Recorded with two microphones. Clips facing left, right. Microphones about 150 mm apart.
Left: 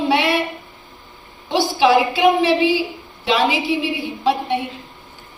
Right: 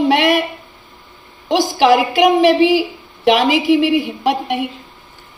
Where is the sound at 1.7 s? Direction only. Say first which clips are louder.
Right 2 dB; 90° right.